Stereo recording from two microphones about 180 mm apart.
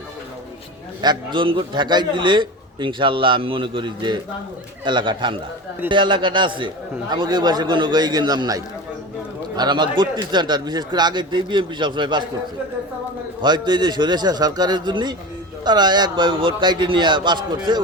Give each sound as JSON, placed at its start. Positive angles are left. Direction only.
{"t": 1.0, "sound": "a man's voice", "side_deg": -25}
{"t": 13.4, "sound": "a man's voice", "side_deg": -25}